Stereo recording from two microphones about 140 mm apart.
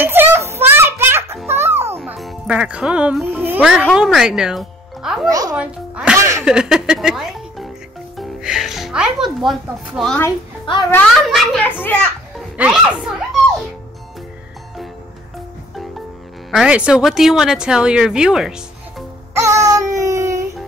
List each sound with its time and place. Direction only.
0.0 s children playing: 15° right (ahead or behind)
1.5 s music: 15° right (ahead or behind)
2.1 s speech: 5° right (ahead or behind)
5.3 s music: 25° right (ahead or behind)
5.6 s music: 5° right (ahead or behind)
6.1 s a sound: 20° right (ahead or behind)
6.4 s speech: 5° right (ahead or behind)
10.7 s a woman's voice: 40° left (ahead or behind)
11.2 s speech: centre (ahead or behind)
12.5 s music: 5° right (ahead or behind)
16.4 s speech: 5° right (ahead or behind)
19.3 s child singing: 20° right (ahead or behind)